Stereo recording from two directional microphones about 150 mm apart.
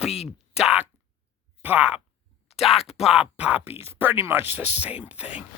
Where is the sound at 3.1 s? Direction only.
5° right (ahead or behind).